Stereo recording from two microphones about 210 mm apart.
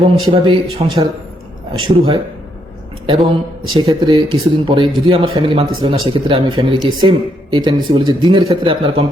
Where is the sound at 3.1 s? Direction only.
25° right (ahead or behind).